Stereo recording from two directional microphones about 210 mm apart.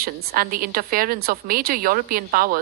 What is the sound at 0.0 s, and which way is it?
A woman's voice, 45° right (ahead or behind).